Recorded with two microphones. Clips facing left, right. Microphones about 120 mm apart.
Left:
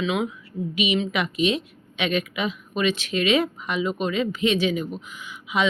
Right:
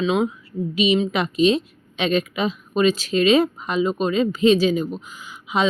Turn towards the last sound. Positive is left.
turn(degrees=-35)  # may be behind; listen again after turning